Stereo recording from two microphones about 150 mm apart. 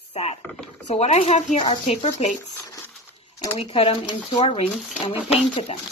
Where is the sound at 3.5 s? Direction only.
35° left (ahead or behind).